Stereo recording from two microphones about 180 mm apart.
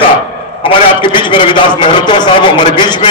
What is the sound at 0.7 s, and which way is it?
A man's voice, 25° left (ahead or behind).